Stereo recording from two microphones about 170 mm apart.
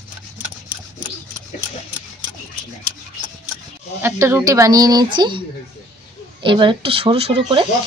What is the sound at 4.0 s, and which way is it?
Speech, 15° right (ahead or behind).